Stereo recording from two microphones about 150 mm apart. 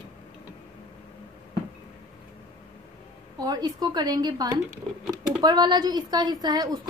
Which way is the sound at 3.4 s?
25° right (ahead or behind).